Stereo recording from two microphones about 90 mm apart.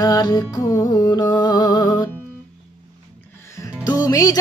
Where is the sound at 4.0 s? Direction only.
40° left (ahead or behind).